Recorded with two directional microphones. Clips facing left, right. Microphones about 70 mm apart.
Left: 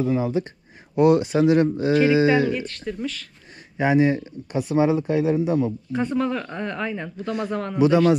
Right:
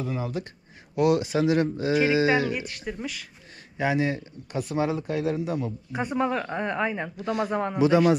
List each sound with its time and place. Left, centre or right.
0.0 s speech: left
2.2 s speech: centre
3.7 s speech: left
4.6 s speech: left
5.9 s a man's voice: centre